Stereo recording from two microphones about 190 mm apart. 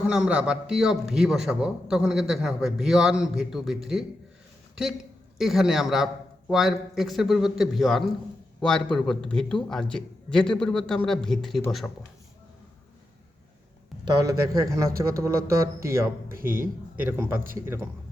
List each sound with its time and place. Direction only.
0.1 s a man's voice: 5° right (ahead or behind)
14.0 s a man's voice: 20° right (ahead or behind)